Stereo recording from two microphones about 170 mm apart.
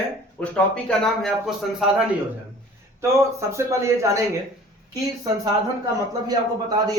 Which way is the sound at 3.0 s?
15° right (ahead or behind).